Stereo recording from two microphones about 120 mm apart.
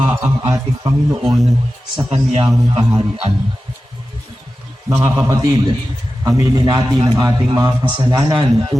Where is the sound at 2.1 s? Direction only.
55° right (ahead or behind).